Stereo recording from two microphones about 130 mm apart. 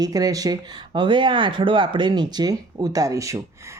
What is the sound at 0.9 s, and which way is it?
Speech, 40° right (ahead or behind).